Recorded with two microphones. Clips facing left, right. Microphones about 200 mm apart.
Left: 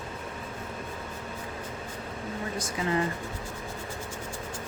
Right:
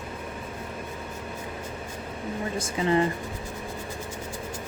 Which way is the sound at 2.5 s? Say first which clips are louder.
Right 5 dB; 25° right (ahead or behind).